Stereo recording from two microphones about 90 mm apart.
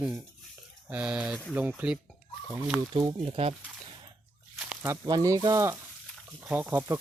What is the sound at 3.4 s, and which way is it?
Speech, 90° right.